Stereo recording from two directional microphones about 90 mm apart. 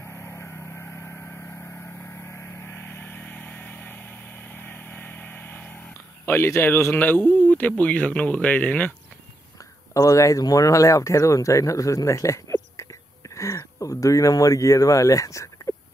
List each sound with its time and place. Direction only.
0.0 s vehicle: 30° left (ahead or behind)
7.0 s speech: 20° left (ahead or behind)
9.9 s speech: 35° left (ahead or behind)